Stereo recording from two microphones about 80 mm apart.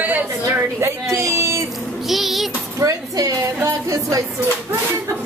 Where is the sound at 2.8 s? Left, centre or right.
Right.